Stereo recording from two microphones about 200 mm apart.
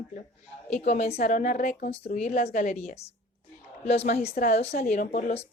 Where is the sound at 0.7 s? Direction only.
30° left (ahead or behind).